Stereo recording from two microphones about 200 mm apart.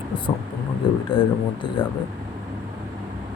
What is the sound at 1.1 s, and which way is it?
Speech, 25° left (ahead or behind).